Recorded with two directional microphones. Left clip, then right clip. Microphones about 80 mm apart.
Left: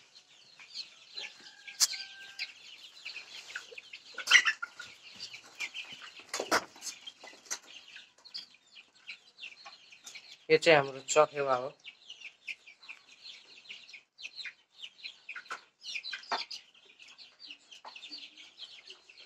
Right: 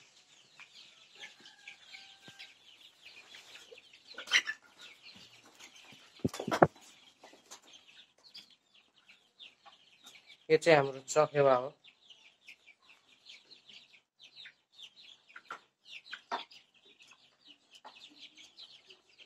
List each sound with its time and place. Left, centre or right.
0.6 s chicken: right
11.1 s speech: right
15.4 s chicken: right
17.8 s chicken: right